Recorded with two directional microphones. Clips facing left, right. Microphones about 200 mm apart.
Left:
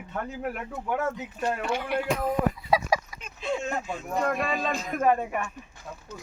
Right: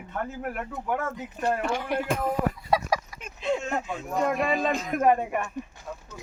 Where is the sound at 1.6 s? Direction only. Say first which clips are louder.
Right 1 dB; 45° right (ahead or behind).